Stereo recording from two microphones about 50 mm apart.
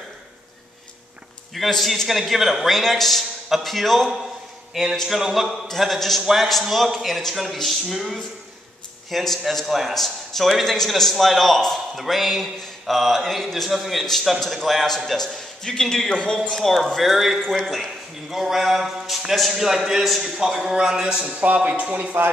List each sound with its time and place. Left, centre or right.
1.5 s a man's voice: centre
16.1 s speech: left
16.3 s a man's voice: centre; by 22.2 s right